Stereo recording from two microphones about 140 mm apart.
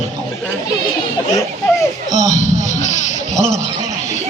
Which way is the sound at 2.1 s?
60° left (ahead or behind).